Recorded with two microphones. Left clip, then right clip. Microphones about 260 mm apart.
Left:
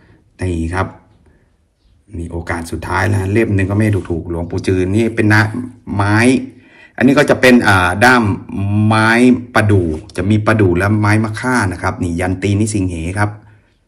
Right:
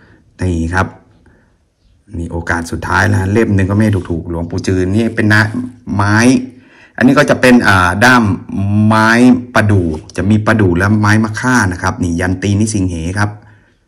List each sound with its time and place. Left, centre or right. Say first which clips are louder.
0.4 s a man's voice: right 4 dB; centre
2.1 s a man's voice: right 5 dB; centre